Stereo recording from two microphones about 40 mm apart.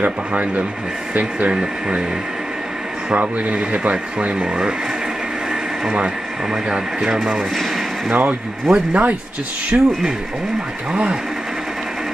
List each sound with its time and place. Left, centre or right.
0.0 s speech: right
1.5 s speech: right
3.5 s speech: right
5.9 s speech: right
8.1 s speech: right
8.7 s speech: right